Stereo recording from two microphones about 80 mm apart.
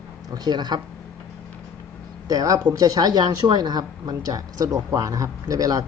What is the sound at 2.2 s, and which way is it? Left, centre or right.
A woman's voice, right.